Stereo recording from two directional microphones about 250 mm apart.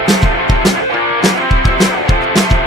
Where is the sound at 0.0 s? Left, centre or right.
Centre.